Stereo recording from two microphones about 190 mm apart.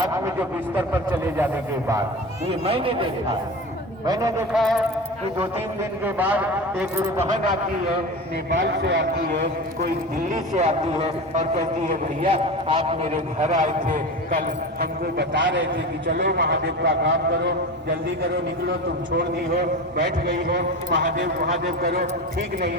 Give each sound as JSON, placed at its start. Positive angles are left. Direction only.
{"t": 0.0, "sound": "speech", "side_deg": -15}
{"t": 2.5, "sound": "speech", "side_deg": -30}
{"t": 4.5, "sound": "a sound", "side_deg": 0}
{"t": 6.1, "sound": "speech", "side_deg": -10}
{"t": 8.4, "sound": "a man's voice", "side_deg": -65}
{"t": 10.2, "sound": "a man's voice", "side_deg": -40}
{"t": 16.0, "sound": "a man's voice", "side_deg": -60}
{"t": 19.1, "sound": "a man's voice", "side_deg": -60}